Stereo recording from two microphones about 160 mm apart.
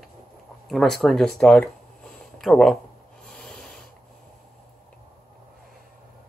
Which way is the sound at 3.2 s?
5° left (ahead or behind).